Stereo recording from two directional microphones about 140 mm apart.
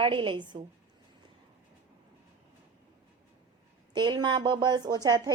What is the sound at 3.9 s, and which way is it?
Speech, 35° right (ahead or behind).